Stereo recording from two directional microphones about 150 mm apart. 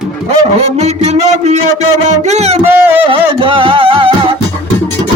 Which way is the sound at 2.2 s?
45° right (ahead or behind).